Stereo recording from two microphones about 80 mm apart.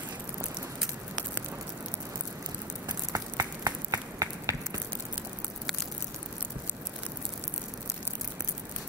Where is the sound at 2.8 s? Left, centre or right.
Right.